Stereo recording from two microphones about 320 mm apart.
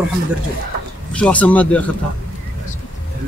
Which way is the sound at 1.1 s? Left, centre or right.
Centre.